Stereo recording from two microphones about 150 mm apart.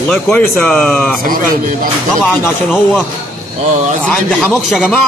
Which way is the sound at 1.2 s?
70° right (ahead or behind).